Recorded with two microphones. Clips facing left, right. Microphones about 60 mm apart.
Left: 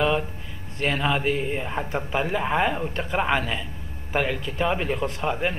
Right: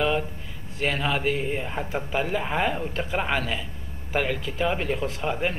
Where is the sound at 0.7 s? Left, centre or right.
Centre.